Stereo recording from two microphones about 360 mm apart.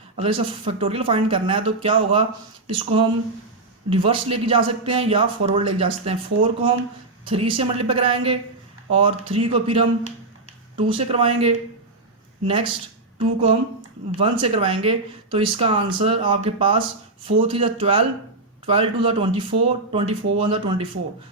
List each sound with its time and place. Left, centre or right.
0.2 s speech: centre
13.1 s speech: centre